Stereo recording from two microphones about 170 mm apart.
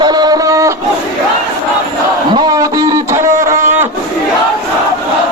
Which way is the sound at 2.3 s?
20° right (ahead or behind).